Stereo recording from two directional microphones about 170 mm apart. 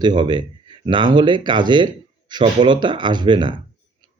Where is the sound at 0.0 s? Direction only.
25° right (ahead or behind).